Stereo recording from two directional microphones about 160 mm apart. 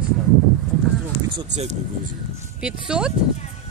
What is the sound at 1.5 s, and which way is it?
Speech, 45° right (ahead or behind).